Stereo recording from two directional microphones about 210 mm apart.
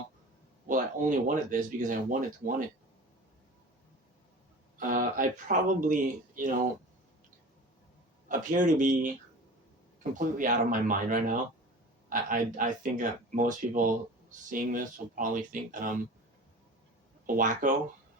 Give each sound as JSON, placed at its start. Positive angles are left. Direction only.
{"t": 1.3, "sound": "speech", "side_deg": -40}
{"t": 4.8, "sound": "speech", "side_deg": -40}
{"t": 8.3, "sound": "speech", "side_deg": -40}
{"t": 17.2, "sound": "speech", "side_deg": -40}